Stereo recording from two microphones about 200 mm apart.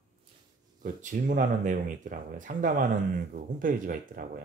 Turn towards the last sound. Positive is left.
turn(degrees=-45)  # may be behind; listen again after turning